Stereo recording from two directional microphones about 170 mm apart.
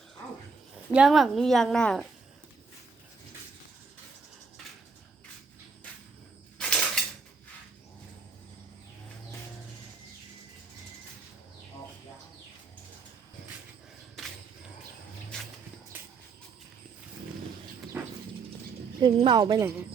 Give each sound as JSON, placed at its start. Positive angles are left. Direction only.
{"t": 0.9, "sound": "speech", "side_deg": 0}
{"t": 6.6, "sound": "dishes", "side_deg": 5}
{"t": 15.3, "sound": "a sound", "side_deg": 5}
{"t": 17.9, "sound": "clip-clop", "side_deg": -10}
{"t": 19.0, "sound": "speech", "side_deg": -25}